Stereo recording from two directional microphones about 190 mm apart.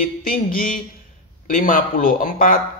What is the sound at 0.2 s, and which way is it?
Speech, 50° left (ahead or behind).